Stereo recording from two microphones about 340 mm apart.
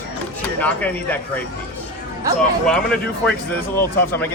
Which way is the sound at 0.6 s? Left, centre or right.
Centre.